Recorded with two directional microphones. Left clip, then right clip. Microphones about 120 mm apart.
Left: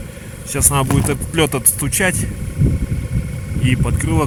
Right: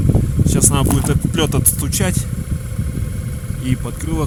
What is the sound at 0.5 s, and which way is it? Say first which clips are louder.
Speech: left 1 dB; 15° right (ahead or behind).